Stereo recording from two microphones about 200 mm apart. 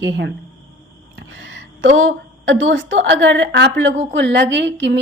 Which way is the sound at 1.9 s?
80° right.